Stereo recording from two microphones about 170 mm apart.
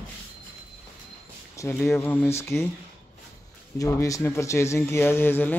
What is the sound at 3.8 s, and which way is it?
Speech, 20° left (ahead or behind).